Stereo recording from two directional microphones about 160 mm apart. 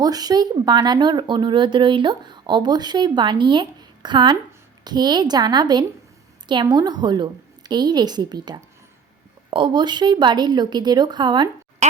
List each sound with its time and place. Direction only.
0.0 s speech: 25° right (ahead or behind)
11.8 s speech: 45° right (ahead or behind)